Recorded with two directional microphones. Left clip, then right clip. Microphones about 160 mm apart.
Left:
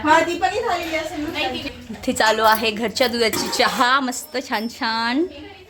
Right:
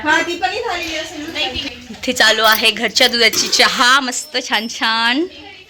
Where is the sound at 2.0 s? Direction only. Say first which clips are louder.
Right 4 dB; centre (ahead or behind).